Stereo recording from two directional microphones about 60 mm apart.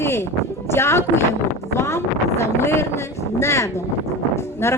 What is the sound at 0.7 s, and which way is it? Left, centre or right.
Speech, left.